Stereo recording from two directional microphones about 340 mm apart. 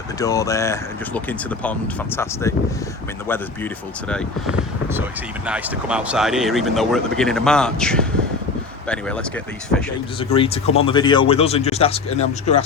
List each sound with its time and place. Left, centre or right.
0.2 s speech: centre
5.5 s speech: centre
10.2 s speech: centre